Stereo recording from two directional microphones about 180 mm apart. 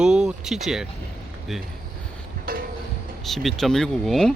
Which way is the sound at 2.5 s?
55° right (ahead or behind).